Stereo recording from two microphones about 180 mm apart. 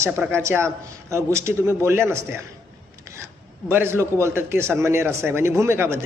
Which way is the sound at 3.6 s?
15° right (ahead or behind).